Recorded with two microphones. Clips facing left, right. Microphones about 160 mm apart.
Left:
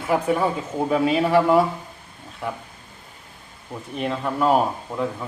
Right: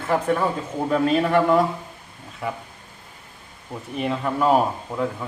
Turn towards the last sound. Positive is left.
turn(degrees=0)  # may be behind; listen again after turning